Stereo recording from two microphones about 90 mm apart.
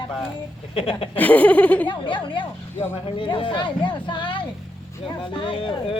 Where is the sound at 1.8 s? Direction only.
60° left (ahead or behind).